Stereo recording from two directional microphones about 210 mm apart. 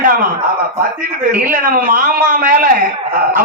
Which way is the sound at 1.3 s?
40° right (ahead or behind).